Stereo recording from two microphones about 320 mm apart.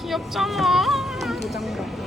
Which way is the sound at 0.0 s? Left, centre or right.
Centre.